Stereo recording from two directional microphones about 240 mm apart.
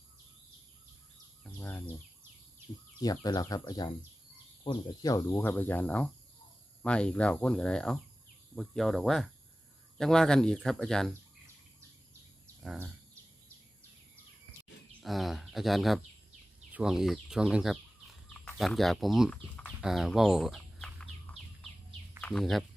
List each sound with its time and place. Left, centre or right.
1.5 s bird: centre
3.0 s speech: centre
12.6 s speech: centre
15.0 s speech: centre
16.7 s chicken: centre
22.2 s speech: centre